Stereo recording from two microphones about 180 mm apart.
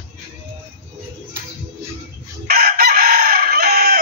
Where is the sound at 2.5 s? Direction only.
55° right (ahead or behind).